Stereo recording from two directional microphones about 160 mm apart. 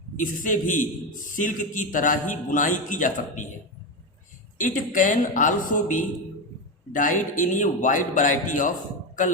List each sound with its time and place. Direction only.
0.2 s a man's voice: 55° left (ahead or behind)
4.5 s a man's voice: 55° left (ahead or behind)